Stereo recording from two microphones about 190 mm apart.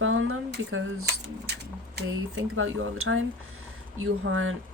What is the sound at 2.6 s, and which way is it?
Speech, 90° right.